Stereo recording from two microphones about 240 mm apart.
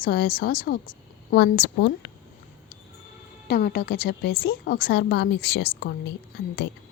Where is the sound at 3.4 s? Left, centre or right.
Left.